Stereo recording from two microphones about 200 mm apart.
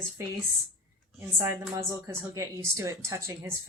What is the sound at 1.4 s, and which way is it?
A woman's voice, 15° right (ahead or behind).